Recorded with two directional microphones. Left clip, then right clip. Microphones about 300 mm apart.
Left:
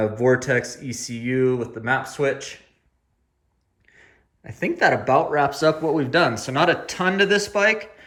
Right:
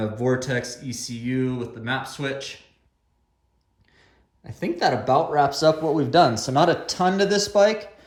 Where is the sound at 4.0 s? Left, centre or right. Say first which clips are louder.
Left 4 dB; centre.